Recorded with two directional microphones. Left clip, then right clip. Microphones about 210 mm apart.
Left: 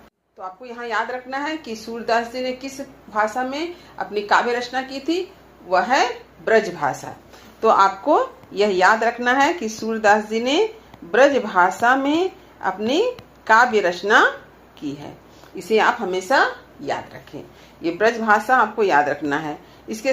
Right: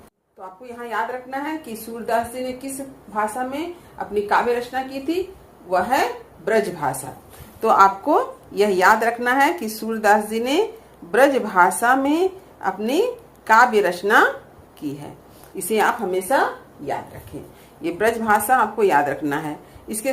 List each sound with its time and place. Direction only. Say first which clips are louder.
0.4 s a woman's voice: left 3 dB; 30° right (ahead or behind)
6.4 s a woman's voice: left 2 dB; 30° right (ahead or behind)